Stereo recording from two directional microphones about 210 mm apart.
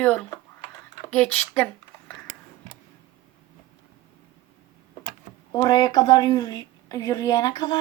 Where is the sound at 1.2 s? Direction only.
10° left (ahead or behind).